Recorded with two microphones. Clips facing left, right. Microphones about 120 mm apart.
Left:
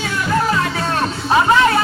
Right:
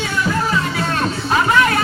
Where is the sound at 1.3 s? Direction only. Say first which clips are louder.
Left 2 dB; 30° left (ahead or behind).